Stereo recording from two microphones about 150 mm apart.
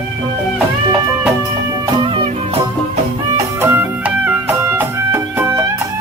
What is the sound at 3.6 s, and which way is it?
Music, 15° right (ahead or behind).